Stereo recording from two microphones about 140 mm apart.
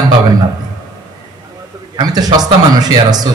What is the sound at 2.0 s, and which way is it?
A man's voice, 25° right (ahead or behind).